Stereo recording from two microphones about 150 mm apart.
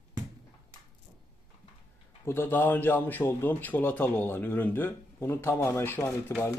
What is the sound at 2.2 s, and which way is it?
A man's voice, 15° left (ahead or behind).